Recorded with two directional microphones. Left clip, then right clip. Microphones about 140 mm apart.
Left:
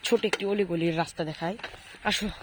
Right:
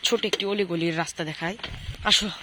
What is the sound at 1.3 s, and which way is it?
Speech, centre (ahead or behind).